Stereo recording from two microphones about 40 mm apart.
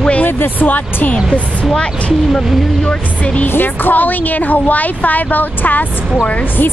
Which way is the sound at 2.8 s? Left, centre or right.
Left.